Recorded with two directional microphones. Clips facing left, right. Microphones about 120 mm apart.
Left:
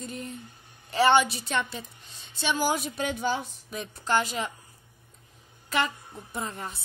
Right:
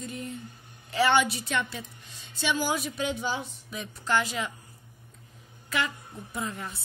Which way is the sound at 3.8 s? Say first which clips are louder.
Left 1 dB; 30° left (ahead or behind).